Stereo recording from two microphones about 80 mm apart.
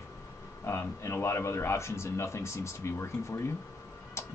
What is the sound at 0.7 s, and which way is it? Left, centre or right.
Speech, left.